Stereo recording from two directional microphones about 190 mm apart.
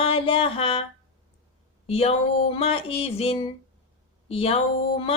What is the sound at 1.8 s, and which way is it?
Speech, 30° left (ahead or behind).